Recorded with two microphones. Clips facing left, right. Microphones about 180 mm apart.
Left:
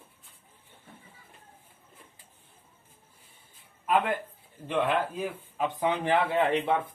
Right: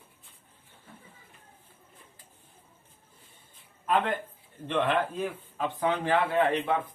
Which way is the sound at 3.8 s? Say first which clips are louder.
Left 1 dB; 10° left (ahead or behind).